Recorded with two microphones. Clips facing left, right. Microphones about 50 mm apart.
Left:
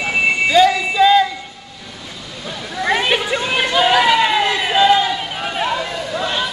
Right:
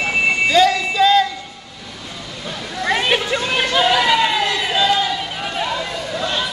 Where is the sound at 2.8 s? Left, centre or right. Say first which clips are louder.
Left 1 dB; centre.